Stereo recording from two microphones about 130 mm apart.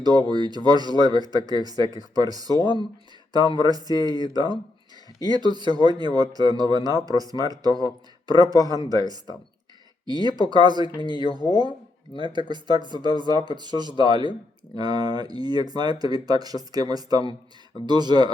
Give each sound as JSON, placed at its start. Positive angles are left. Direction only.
{"t": 0.0, "sound": "speech", "side_deg": -30}